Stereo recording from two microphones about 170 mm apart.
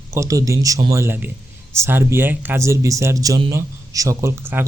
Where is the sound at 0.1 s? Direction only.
20° right (ahead or behind).